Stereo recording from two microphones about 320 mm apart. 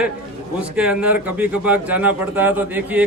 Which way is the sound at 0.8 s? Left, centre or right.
Centre.